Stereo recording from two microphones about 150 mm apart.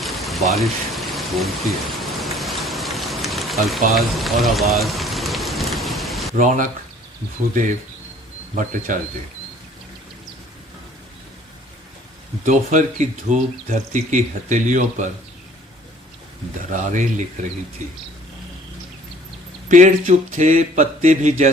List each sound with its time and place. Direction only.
0.0 s vehicle: centre (ahead or behind)
3.9 s speech: centre (ahead or behind)
4.7 s rain: centre (ahead or behind)
6.3 s speech: 60° right (ahead or behind)
8.9 s speech: 60° right (ahead or behind)
12.5 s speech: 55° right (ahead or behind)
16.7 s speech: 55° right (ahead or behind)
19.6 s speech: 55° right (ahead or behind)